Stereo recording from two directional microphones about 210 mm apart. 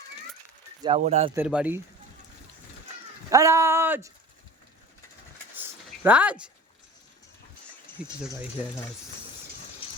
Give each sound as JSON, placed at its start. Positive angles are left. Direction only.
{"t": 0.8, "sound": "speech", "side_deg": -25}
{"t": 1.3, "sound": "speech", "side_deg": -5}
{"t": 3.2, "sound": "speech", "side_deg": -15}
{"t": 5.5, "sound": "a sound", "side_deg": -10}